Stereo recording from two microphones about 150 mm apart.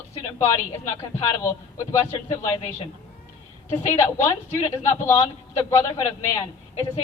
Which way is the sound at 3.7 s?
20° left (ahead or behind).